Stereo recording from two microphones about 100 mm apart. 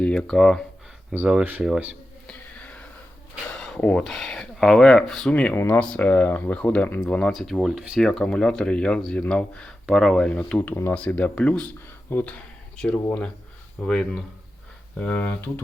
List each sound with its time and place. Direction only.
0.0 s speech: 10° left (ahead or behind)
1.1 s speech: 15° right (ahead or behind)
2.2 s a sound: 15° left (ahead or behind)
3.5 s speech: 10° left (ahead or behind)